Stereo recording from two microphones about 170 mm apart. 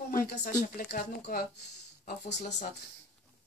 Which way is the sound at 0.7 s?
60° left (ahead or behind).